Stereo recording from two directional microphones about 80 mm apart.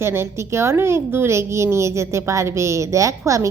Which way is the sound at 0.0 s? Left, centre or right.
Right.